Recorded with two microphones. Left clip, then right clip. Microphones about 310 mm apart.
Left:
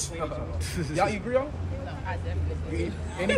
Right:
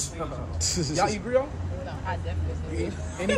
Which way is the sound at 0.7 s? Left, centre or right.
Centre.